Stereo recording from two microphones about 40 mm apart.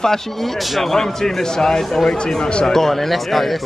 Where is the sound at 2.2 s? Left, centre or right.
Centre.